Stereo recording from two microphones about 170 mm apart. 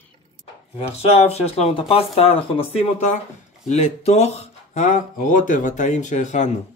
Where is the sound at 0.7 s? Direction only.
40° left (ahead or behind).